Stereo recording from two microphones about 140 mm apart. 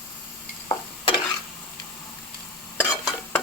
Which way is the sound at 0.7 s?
35° left (ahead or behind).